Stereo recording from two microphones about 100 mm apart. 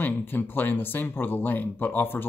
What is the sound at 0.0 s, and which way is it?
Speech, 20° left (ahead or behind).